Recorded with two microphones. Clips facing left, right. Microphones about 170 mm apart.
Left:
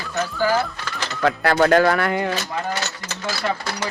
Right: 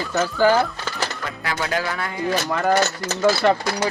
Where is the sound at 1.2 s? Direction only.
65° left (ahead or behind).